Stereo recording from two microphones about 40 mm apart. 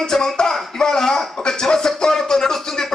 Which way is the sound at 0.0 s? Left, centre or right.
Centre.